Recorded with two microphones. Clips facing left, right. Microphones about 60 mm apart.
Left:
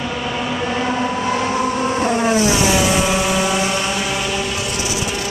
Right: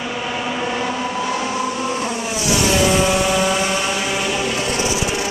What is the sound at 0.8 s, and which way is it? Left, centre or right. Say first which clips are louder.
Vehicle: left 3 dB; left.